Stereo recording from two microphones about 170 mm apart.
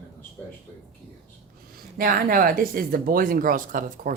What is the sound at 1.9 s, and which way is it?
Speech, 55° right (ahead or behind).